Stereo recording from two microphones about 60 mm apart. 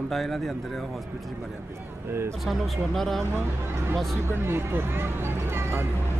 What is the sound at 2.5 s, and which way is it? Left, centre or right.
Speech, centre.